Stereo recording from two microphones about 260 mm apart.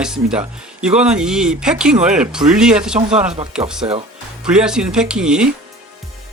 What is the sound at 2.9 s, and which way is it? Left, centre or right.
Speech, right.